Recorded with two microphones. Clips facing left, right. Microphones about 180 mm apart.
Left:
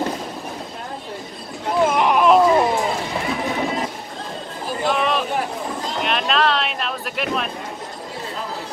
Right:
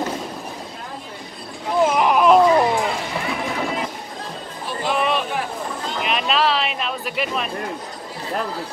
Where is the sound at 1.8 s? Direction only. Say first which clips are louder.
Even; centre (ahead or behind).